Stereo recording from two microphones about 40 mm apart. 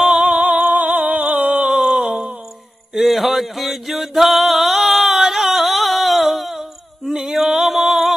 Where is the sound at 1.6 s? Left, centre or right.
Centre.